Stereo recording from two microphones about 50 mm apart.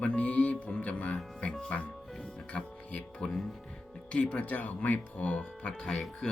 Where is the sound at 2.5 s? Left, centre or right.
Centre.